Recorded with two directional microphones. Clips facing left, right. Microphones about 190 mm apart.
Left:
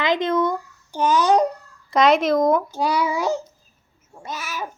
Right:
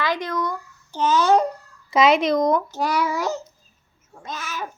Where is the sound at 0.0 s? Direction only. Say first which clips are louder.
Left 5 dB; 20° left (ahead or behind).